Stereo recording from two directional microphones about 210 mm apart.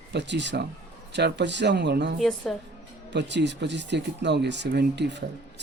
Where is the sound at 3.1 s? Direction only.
55° right (ahead or behind).